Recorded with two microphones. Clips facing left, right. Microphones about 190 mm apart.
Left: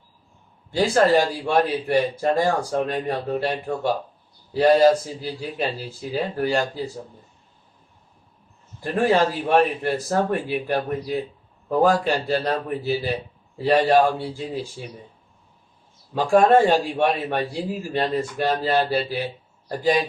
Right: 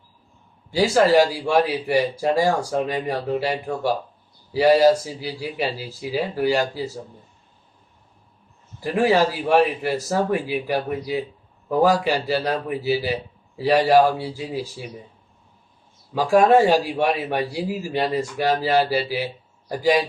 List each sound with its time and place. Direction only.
0.8 s a man's voice: 5° right (ahead or behind)
8.8 s a man's voice: 10° right (ahead or behind)
16.1 s a man's voice: 5° right (ahead or behind)